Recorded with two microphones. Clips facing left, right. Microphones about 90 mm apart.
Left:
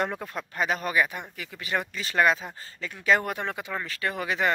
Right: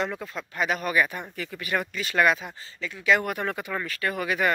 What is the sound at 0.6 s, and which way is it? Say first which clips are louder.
Speech: right 1 dB; 35° left (ahead or behind).